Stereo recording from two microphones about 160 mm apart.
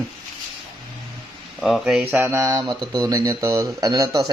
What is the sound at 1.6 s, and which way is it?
Speech, centre (ahead or behind).